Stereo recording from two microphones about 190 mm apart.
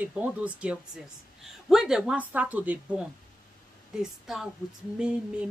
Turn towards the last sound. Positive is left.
turn(degrees=-5)  # may be behind; listen again after turning